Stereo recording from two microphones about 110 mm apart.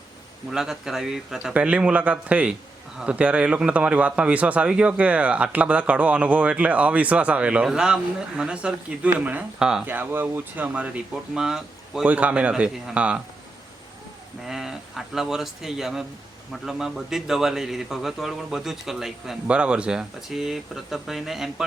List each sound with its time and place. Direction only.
0.5 s speech: 5° right (ahead or behind)
9.8 s speech: 15° right (ahead or behind)
14.4 s a man's voice: 5° right (ahead or behind)